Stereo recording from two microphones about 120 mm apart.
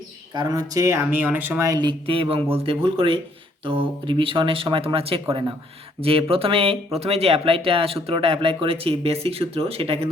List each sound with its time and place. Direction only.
0.3 s speech: 30° right (ahead or behind)
1.8 s speech: 45° right (ahead or behind)